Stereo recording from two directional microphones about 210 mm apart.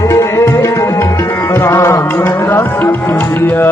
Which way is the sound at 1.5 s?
10° left (ahead or behind).